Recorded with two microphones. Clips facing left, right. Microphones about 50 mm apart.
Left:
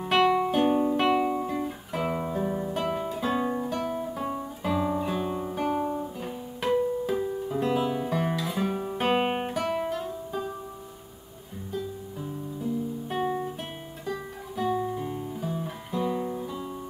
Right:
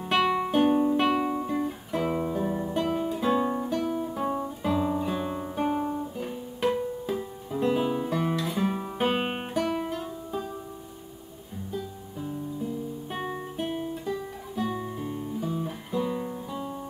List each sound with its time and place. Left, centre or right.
0.1 s music: centre
3.3 s guitar: centre
4.2 s guitar: centre
7.2 s music: centre
7.7 s music: centre
8.0 s guitar: centre
9.8 s music: centre
13.1 s guitar: centre